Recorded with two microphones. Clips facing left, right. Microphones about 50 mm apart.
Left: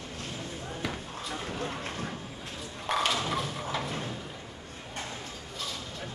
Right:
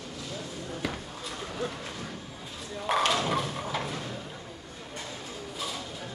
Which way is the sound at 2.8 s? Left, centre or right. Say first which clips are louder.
Right 3 dB; centre.